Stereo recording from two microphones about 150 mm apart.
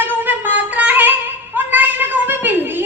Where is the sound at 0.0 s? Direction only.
15° right (ahead or behind).